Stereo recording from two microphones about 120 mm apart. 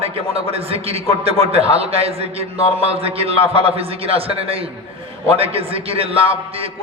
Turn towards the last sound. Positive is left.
turn(degrees=-55)  # may be behind; listen again after turning